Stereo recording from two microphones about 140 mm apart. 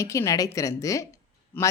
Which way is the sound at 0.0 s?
20° left (ahead or behind).